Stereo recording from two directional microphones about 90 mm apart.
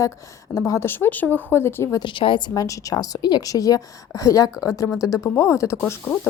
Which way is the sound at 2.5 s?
40° left (ahead or behind).